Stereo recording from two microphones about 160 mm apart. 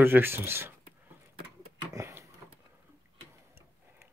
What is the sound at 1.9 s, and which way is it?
Sniff, 15° right (ahead or behind).